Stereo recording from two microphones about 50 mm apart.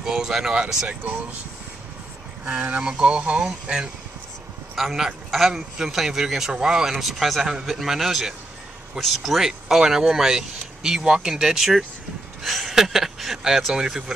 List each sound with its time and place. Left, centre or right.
0.0 s speech: centre
2.6 s speech: right
4.7 s a man's voice: centre